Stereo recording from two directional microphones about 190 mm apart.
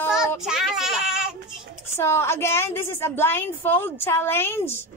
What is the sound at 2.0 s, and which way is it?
A woman's voice, 15° left (ahead or behind).